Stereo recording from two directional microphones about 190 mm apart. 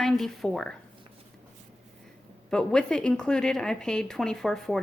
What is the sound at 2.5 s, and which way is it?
Speech, 5° left (ahead or behind).